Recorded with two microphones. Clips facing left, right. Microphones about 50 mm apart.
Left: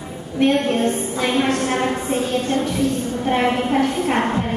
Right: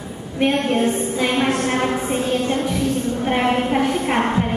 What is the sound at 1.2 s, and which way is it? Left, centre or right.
Speech, centre.